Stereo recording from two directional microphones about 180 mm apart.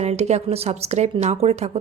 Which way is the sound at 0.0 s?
35° right (ahead or behind).